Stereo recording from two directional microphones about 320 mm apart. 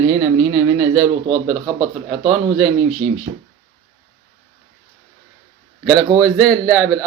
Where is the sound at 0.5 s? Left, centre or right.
Centre.